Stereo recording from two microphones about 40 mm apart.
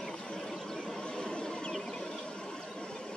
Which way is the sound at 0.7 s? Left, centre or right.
Centre.